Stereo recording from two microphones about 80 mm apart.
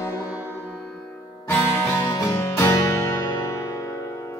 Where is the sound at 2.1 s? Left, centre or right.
Left.